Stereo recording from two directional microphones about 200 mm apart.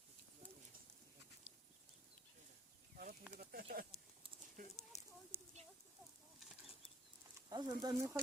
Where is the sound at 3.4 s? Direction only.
50° right (ahead or behind).